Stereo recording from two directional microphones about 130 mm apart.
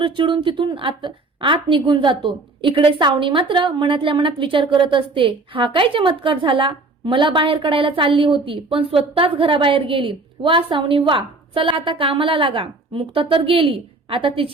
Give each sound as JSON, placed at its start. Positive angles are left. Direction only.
{"t": 0.0, "sound": "a woman's voice", "side_deg": -40}